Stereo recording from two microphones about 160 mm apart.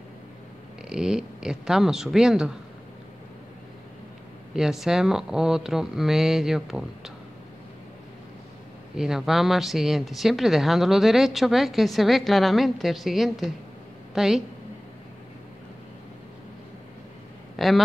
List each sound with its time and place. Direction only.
0.8 s speech: 5° right (ahead or behind)
4.6 s speech: 5° right (ahead or behind)
8.9 s speech: 5° right (ahead or behind)
17.6 s speech: centre (ahead or behind)